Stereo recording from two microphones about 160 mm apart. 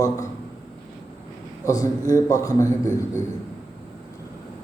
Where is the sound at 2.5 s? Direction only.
15° right (ahead or behind).